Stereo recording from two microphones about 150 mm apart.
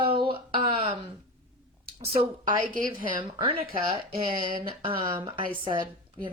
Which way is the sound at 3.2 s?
35° right (ahead or behind).